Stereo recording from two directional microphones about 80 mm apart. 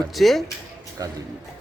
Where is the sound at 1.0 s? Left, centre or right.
Right.